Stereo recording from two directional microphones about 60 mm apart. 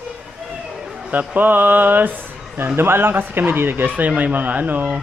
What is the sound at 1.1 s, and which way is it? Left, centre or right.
Speech, right.